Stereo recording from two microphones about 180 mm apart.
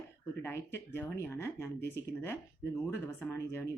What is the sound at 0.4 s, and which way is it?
Speech, 15° left (ahead or behind).